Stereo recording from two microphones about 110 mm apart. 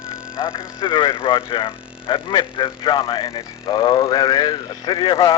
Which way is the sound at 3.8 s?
30° left (ahead or behind).